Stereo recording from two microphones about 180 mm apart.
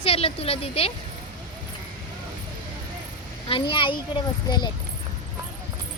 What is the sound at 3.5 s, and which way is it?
Speech, 30° left (ahead or behind).